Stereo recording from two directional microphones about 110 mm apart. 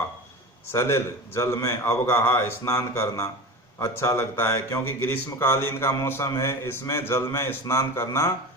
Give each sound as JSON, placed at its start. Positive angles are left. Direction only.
{"t": 0.7, "sound": "speech", "side_deg": 25}